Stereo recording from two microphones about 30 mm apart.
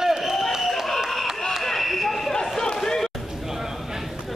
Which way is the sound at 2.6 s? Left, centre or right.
Centre.